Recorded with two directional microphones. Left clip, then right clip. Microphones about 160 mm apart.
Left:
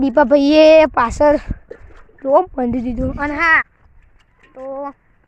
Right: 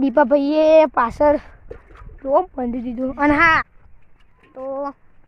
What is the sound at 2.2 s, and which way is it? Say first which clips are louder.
Speech: left 4 dB; 20° left (ahead or behind).